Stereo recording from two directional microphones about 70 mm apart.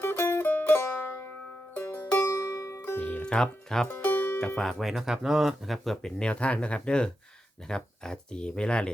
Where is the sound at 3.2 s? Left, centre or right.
Centre.